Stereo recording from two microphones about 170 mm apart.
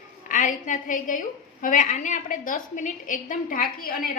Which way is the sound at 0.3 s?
50° left (ahead or behind).